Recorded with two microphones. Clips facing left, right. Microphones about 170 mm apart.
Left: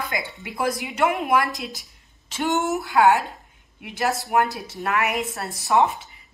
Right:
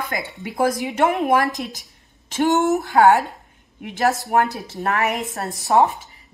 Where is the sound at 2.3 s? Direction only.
40° right (ahead or behind).